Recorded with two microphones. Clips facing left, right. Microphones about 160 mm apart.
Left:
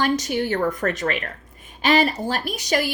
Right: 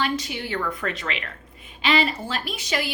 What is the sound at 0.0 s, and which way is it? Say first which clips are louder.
A woman's voice: left 5 dB; 45° left (ahead or behind).